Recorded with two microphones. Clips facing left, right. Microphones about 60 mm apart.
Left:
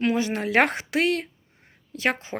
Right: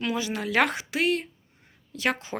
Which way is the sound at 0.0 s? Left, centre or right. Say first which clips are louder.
Left 5 dB; left.